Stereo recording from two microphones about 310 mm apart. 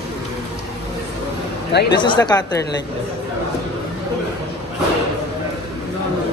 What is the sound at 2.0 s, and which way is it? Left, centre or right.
Speech, centre.